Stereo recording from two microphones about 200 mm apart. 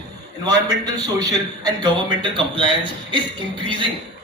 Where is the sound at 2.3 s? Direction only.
25° right (ahead or behind).